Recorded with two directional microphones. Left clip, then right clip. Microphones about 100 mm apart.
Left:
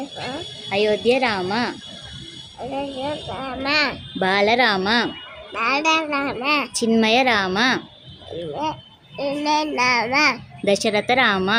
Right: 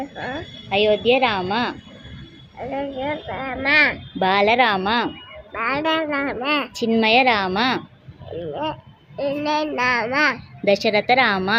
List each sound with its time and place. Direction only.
0.2 s speech: 5° left (ahead or behind)
0.7 s a child's voice: 30° left (ahead or behind)
2.7 s speech: 15° left (ahead or behind)
3.2 s a child's voice: 30° left (ahead or behind)
4.7 s a child's voice: 40° left (ahead or behind)